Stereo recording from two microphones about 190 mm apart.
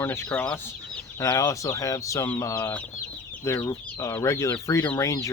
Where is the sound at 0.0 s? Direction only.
10° left (ahead or behind).